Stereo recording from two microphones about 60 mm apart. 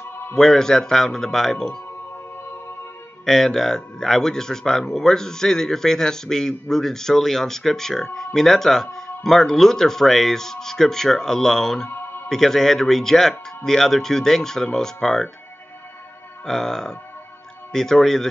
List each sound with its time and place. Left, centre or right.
0.4 s speech: centre
3.3 s speech: centre
11.9 s music: left
12.3 s speech: centre
16.4 s speech: centre